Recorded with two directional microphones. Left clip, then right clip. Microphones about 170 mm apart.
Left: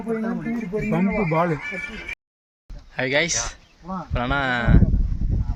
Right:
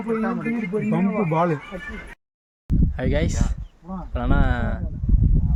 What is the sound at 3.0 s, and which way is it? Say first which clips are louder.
Speech: left 6 dB; 5° right (ahead or behind).